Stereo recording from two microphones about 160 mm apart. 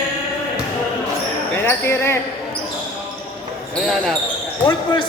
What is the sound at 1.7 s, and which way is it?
Speech, 15° left (ahead or behind).